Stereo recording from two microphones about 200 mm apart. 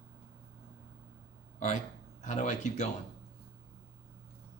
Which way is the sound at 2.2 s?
35° left (ahead or behind).